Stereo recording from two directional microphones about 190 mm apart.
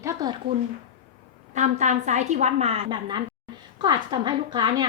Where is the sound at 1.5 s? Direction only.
40° right (ahead or behind).